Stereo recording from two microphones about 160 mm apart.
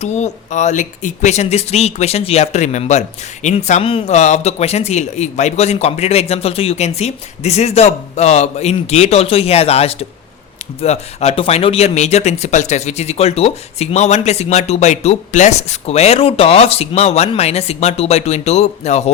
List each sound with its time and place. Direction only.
0.0 s speech: 45° left (ahead or behind)